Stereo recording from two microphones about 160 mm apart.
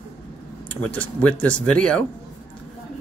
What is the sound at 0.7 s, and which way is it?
Speech, 10° left (ahead or behind).